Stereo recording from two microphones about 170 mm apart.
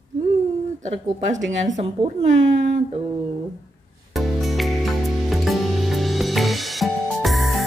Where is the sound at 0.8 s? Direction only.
45° right (ahead or behind).